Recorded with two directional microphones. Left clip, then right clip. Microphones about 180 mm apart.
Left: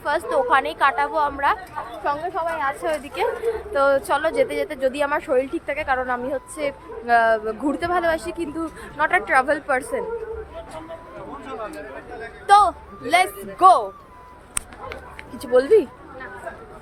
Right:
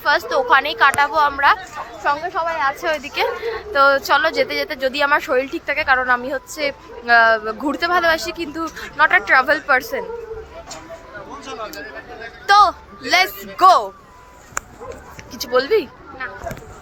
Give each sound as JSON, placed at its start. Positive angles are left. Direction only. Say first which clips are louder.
{"t": 0.0, "sound": "a woman's voice", "louder": "right 4 dB", "side_deg": 0}
{"t": 12.5, "sound": "a woman's voice", "louder": "right 2 dB", "side_deg": 0}
{"t": 15.4, "sound": "speech", "louder": "left 1 dB", "side_deg": 30}